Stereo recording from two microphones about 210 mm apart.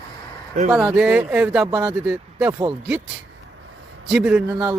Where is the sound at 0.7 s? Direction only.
Centre (ahead or behind).